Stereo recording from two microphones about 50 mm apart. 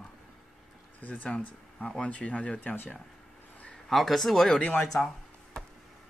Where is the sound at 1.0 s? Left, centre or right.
Left.